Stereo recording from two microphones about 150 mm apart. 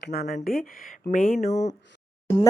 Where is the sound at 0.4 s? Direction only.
70° left (ahead or behind); by 1.7 s 50° left (ahead or behind).